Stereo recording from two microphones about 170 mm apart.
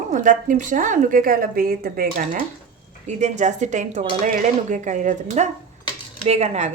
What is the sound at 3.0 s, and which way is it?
A woman's voice, 45° right (ahead or behind).